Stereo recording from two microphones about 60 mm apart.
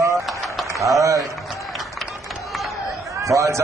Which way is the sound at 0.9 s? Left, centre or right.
Right.